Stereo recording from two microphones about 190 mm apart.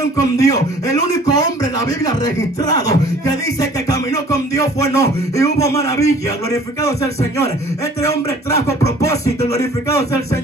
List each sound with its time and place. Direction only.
0.2 s speech: 20° left (ahead or behind)
3.9 s music: 20° left (ahead or behind)